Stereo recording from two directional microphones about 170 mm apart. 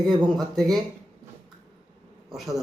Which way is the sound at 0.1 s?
25° right (ahead or behind).